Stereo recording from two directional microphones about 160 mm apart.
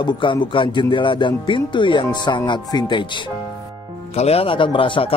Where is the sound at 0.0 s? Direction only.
30° left (ahead or behind).